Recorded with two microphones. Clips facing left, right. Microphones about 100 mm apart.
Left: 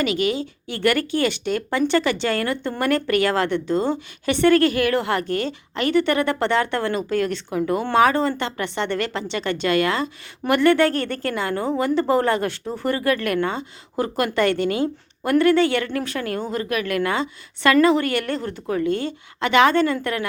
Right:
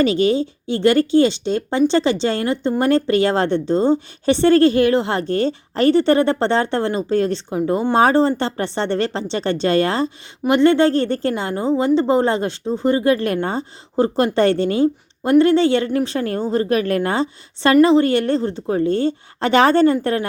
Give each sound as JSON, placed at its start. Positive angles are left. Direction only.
{"t": 0.0, "sound": "a woman's voice", "side_deg": -30}
{"t": 10.4, "sound": "a woman's voice", "side_deg": -20}